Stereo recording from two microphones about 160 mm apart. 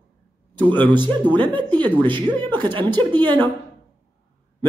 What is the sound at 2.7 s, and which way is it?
Speech, 30° right (ahead or behind).